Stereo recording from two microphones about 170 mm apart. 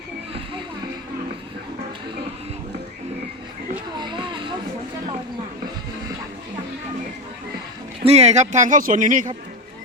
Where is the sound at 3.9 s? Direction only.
25° right (ahead or behind).